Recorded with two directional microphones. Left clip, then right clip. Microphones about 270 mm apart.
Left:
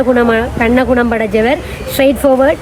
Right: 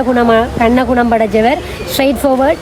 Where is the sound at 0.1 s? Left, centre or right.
Centre.